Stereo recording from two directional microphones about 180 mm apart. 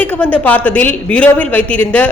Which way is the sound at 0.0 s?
10° left (ahead or behind).